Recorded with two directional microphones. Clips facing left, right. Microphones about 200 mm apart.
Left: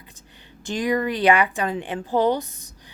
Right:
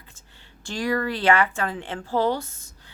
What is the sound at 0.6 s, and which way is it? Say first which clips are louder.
A woman's voice: left 3 dB; 20° left (ahead or behind).